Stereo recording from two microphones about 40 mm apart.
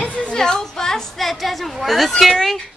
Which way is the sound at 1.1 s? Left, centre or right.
Centre.